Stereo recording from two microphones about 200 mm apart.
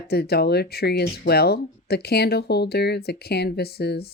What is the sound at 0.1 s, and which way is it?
Speech, 50° left (ahead or behind).